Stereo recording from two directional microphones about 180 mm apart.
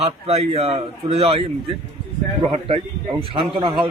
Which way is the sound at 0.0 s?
35° right (ahead or behind).